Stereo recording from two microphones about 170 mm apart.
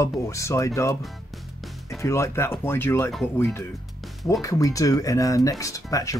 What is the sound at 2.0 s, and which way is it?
Speech, 15° left (ahead or behind).